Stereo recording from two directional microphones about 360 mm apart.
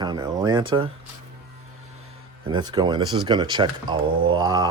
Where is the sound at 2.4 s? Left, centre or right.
Centre.